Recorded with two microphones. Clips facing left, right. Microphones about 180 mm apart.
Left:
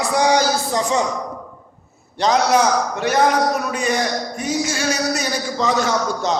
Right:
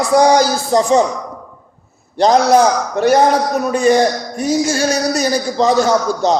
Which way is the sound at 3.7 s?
35° right (ahead or behind).